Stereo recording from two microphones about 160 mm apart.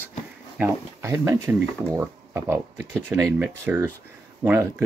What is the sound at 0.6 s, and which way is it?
Speech, 15° right (ahead or behind).